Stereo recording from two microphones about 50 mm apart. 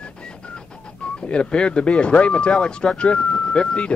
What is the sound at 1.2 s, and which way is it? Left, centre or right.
Speech, centre.